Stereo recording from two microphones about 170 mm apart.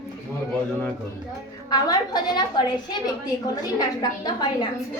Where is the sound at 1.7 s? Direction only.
25° left (ahead or behind).